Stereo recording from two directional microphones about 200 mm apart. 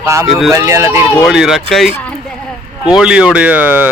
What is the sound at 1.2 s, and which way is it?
Speech, centre (ahead or behind).